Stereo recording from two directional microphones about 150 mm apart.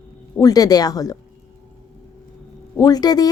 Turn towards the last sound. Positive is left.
turn(degrees=25)  # may be behind; listen again after turning